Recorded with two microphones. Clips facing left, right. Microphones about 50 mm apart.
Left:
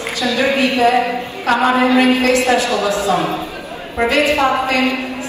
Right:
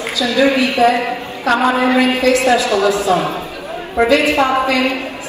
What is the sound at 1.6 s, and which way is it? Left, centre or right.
A woman's voice, left.